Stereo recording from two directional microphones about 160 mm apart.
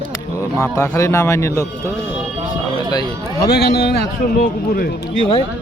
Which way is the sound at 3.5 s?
80° left.